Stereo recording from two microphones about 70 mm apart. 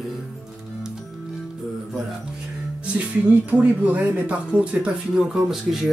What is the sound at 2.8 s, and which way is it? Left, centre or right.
Speech, centre.